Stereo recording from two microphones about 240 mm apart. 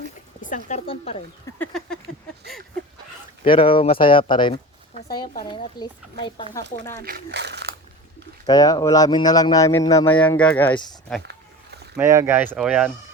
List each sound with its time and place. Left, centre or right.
0.4 s speech: left
1.5 s speech: centre
3.4 s speech: left
7.0 s speech: right
8.4 s speech: centre
11.2 s a sound: right
11.9 s speech: centre